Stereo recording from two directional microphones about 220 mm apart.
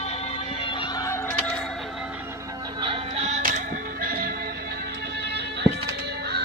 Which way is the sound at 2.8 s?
25° right (ahead or behind).